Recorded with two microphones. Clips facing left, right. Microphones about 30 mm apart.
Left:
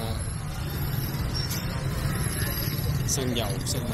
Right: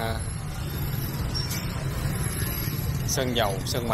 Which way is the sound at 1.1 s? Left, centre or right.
Centre.